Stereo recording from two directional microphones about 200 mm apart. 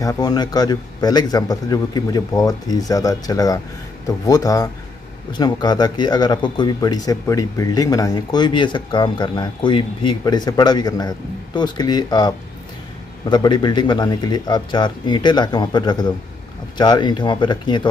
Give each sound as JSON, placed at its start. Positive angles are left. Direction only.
{"t": 0.0, "sound": "speech", "side_deg": 20}